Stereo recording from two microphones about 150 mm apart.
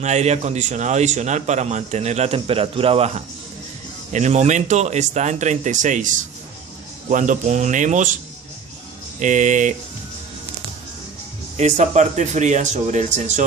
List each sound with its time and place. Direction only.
0.0 s a man's voice: 50° right (ahead or behind)
9.2 s speech: 55° right (ahead or behind)
11.5 s a man's voice: 50° right (ahead or behind)